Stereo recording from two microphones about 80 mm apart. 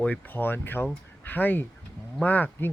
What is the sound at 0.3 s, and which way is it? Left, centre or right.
Speech, left.